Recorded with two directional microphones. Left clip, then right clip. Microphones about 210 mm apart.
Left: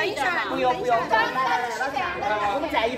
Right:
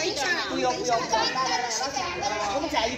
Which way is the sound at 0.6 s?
5° left (ahead or behind).